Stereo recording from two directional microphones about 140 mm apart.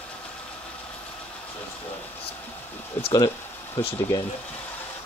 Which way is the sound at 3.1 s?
30° left (ahead or behind).